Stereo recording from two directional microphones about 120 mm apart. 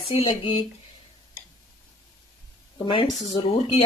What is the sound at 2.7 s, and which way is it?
Speech, 45° left (ahead or behind).